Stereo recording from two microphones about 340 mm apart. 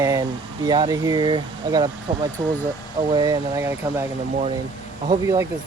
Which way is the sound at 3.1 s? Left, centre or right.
Centre.